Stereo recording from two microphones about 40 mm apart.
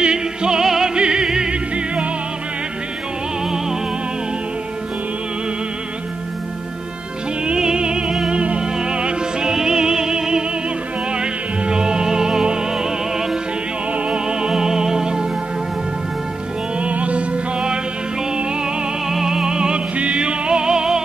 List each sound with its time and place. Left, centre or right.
0.0 s music: right
0.9 s music: right
3.4 s music: centre
7.5 s music: centre
13.9 s music: right
16.8 s music: right; by 21.0 s centre